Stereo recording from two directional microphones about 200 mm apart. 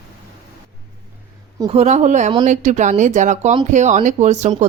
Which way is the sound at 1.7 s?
30° right (ahead or behind).